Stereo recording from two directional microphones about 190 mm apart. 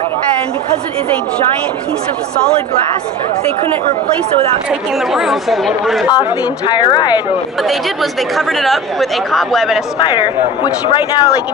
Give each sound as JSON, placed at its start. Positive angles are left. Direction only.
{"t": 4.6, "sound": "speech", "side_deg": 0}
{"t": 6.0, "sound": "speech", "side_deg": 20}
{"t": 7.6, "sound": "speech", "side_deg": 0}
{"t": 9.9, "sound": "speech", "side_deg": 25}